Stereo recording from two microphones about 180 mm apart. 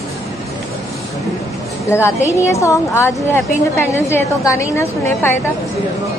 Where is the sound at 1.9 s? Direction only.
15° left (ahead or behind).